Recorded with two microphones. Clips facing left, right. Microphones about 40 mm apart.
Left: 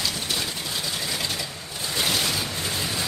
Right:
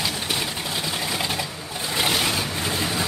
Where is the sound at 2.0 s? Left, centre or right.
Right.